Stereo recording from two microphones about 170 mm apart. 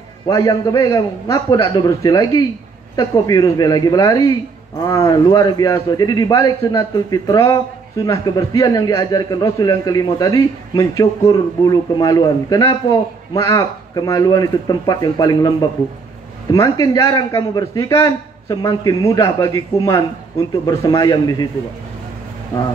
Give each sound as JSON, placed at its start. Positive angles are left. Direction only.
{"t": 0.3, "sound": "a man's voice", "side_deg": 20}
{"t": 16.5, "sound": "a man's voice", "side_deg": 20}